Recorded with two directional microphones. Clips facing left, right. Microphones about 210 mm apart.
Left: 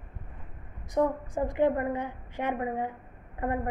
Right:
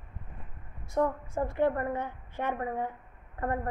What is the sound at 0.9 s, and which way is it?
A woman's voice, 15° left (ahead or behind).